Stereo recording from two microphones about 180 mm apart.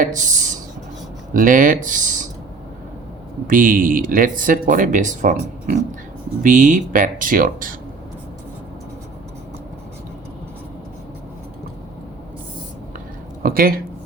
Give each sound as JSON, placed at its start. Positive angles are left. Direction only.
{"t": 0.0, "sound": "speech", "side_deg": -45}
{"t": 3.4, "sound": "speech", "side_deg": -50}
{"t": 13.4, "sound": "a sound", "side_deg": -55}